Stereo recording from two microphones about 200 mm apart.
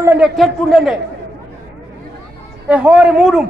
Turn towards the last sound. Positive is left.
turn(degrees=-5)  # may be behind; listen again after turning